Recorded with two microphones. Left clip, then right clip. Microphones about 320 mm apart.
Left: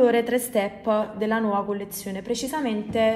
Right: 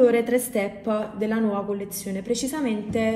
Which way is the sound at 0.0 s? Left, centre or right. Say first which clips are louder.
Right 1 dB; left.